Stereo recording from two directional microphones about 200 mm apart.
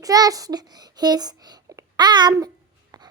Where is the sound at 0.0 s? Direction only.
20° right (ahead or behind).